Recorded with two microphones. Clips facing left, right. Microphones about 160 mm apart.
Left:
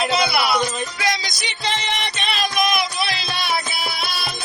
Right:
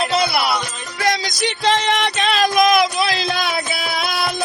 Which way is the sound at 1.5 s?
80° right.